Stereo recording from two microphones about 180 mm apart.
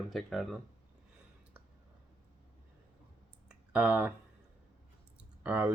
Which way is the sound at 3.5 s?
5° right (ahead or behind).